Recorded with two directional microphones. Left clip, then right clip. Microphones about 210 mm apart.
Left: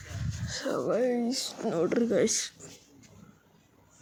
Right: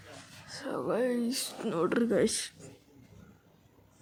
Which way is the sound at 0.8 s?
Centre (ahead or behind).